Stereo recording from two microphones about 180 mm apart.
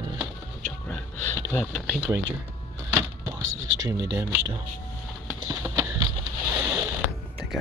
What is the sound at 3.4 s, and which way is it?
Speech, 90° right.